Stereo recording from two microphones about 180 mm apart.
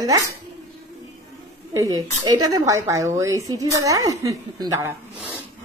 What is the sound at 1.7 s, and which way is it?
A woman's voice, 20° right (ahead or behind).